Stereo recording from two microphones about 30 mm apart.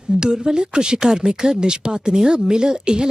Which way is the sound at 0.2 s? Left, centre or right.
Right.